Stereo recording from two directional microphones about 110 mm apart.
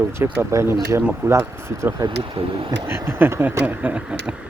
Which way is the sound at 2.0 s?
55° right (ahead or behind).